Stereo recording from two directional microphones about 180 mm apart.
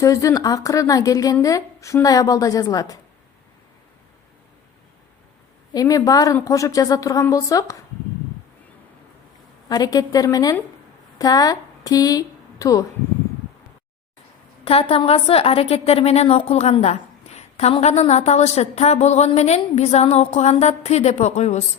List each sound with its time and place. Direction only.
0.0 s a woman's voice: 20° left (ahead or behind)
5.7 s a woman's voice: 20° left (ahead or behind)
9.6 s a woman's voice: 20° left (ahead or behind)
14.6 s a woman's voice: 30° left (ahead or behind)